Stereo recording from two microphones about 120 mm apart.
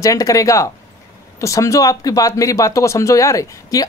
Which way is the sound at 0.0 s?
30° left (ahead or behind).